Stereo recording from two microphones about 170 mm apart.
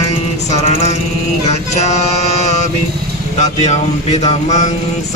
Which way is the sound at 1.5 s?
40° left (ahead or behind).